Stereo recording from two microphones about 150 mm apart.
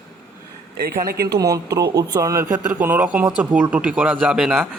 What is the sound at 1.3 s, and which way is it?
A man's voice, 25° right (ahead or behind).